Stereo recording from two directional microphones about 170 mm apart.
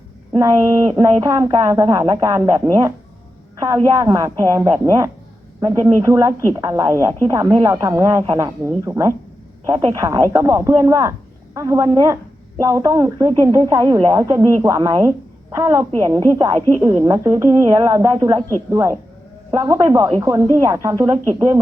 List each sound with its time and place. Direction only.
0.3 s a woman's voice: 20° right (ahead or behind)